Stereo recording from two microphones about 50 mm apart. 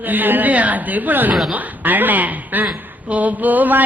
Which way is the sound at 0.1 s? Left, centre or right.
Right.